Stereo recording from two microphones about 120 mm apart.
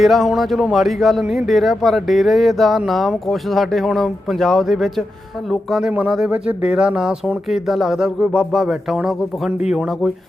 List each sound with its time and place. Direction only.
0.0 s speech: centre (ahead or behind)